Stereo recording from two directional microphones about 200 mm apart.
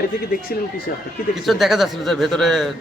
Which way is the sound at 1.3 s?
Centre (ahead or behind).